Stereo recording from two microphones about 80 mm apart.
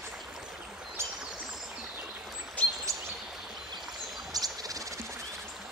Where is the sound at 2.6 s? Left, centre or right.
Centre.